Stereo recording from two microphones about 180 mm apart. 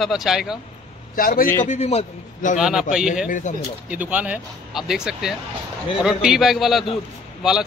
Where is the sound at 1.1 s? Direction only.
50° left (ahead or behind).